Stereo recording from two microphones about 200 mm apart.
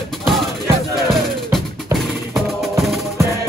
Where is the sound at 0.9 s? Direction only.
Centre (ahead or behind).